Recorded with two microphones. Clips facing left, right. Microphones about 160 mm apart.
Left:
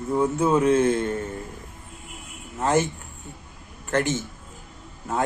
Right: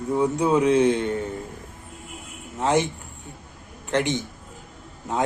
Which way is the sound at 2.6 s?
15° right (ahead or behind).